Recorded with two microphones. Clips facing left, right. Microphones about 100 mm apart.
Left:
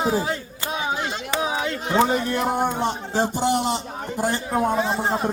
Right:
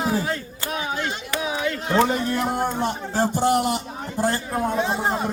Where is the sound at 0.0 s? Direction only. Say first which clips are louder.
Left 1 dB; 20° left (ahead or behind).